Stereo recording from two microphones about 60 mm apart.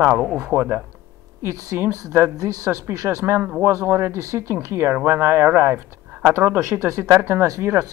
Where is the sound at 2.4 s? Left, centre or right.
Right.